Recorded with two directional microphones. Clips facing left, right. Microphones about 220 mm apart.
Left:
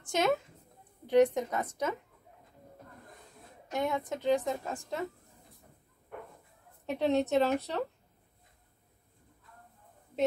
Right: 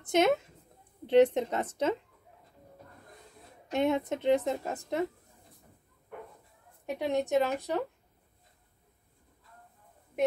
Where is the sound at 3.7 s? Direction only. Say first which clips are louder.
Right 4 dB; 25° right (ahead or behind).